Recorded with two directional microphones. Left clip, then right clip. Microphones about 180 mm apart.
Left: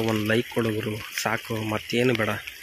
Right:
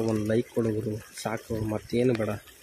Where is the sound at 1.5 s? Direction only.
10° left (ahead or behind).